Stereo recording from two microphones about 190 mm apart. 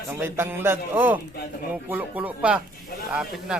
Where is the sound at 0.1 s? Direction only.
10° right (ahead or behind).